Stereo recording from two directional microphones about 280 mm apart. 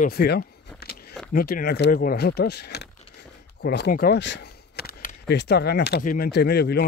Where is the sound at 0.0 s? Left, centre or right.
Left.